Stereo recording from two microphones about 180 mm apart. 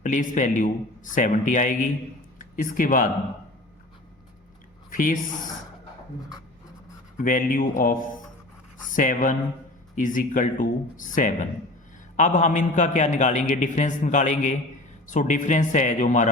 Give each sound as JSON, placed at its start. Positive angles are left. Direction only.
{"t": 0.0, "sound": "a man's voice", "side_deg": 45}
{"t": 4.9, "sound": "a woman's voice", "side_deg": 50}
{"t": 7.2, "sound": "a man's voice", "side_deg": 50}